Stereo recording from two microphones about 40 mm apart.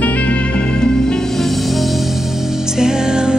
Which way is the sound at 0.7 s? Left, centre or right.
Centre.